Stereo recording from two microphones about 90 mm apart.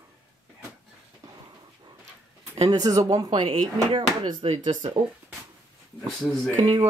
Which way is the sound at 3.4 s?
75° right (ahead or behind).